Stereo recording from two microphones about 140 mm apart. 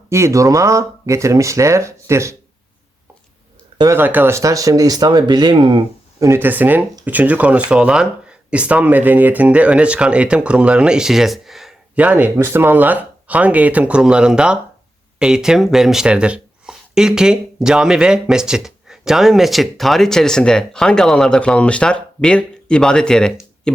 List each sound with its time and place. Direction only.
0.1 s speech: 20° right (ahead or behind)
3.9 s speech: 15° right (ahead or behind); by 5.8 s 35° right (ahead or behind)
6.1 s speech: 20° right (ahead or behind); by 23.7 s 5° left (ahead or behind)